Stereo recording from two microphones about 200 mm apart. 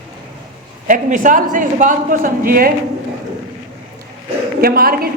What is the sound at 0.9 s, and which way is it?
A woman's voice, 40° right (ahead or behind).